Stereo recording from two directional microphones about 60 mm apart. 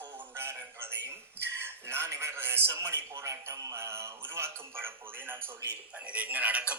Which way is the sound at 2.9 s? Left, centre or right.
Right.